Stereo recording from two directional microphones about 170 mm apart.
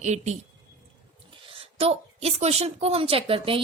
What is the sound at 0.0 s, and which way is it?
A woman's voice, 40° right (ahead or behind).